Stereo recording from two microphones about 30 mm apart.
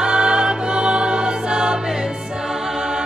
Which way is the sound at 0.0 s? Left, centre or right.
Right.